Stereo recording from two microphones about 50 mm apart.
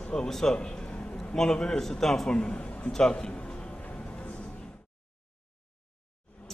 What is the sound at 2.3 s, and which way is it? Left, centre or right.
Speech, left.